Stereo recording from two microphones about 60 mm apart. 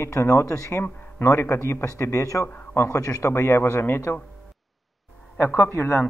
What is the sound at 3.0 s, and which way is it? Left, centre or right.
Speech, left.